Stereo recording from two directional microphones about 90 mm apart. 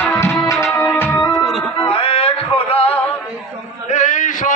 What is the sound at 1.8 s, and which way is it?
Music, 90° left.